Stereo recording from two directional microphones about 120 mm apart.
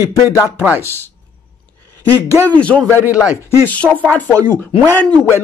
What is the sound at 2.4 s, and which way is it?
Speech, 10° left (ahead or behind).